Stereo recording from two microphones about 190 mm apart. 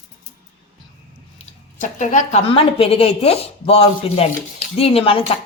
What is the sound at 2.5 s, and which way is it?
Speech, 30° left (ahead or behind).